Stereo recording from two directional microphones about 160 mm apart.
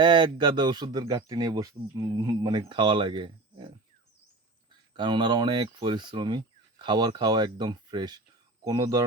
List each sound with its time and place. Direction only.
0.0 s speech: 30° right (ahead or behind)
4.9 s speech: 30° right (ahead or behind)